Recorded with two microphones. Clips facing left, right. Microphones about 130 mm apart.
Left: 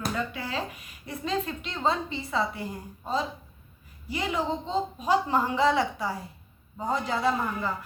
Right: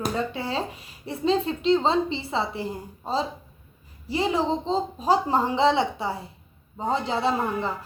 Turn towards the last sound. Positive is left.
turn(degrees=-25)  # may be behind; listen again after turning